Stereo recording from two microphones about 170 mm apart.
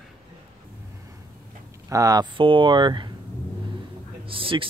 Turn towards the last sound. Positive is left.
turn(degrees=-30)  # may be behind; listen again after turning